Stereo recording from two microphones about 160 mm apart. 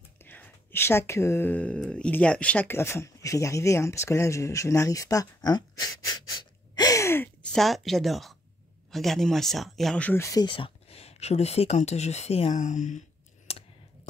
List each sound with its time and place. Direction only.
0.2 s speech: 10° left (ahead or behind)
6.7 s gasp: 25° left (ahead or behind)
7.5 s speech: centre (ahead or behind); by 13.0 s 50° left (ahead or behind)
13.5 s clicking: 40° left (ahead or behind)